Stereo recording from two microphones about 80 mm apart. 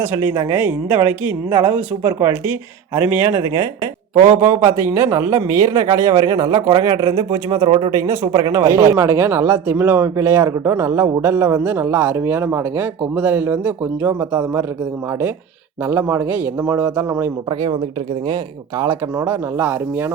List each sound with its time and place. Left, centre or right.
0.0 s speech: right
4.1 s speech: right
6.8 s speech: right
8.3 s speech: right
8.5 s speech: right
11.2 s speech: right
15.9 s speech: right
18.9 s speech: right